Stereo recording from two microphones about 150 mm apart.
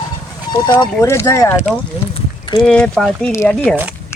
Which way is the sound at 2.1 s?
30° left (ahead or behind).